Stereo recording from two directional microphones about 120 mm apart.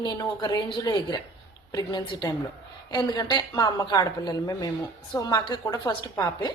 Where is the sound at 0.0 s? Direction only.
35° left (ahead or behind).